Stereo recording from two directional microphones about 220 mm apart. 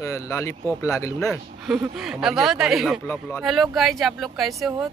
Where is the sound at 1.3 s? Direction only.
Centre (ahead or behind).